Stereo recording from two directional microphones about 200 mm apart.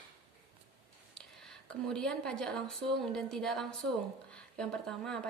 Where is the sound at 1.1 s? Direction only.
5° left (ahead or behind).